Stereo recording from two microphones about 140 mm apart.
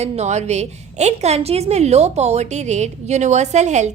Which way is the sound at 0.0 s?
55° right (ahead or behind).